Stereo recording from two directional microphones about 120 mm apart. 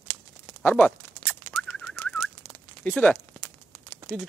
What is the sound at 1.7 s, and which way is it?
Bird, 5° left (ahead or behind).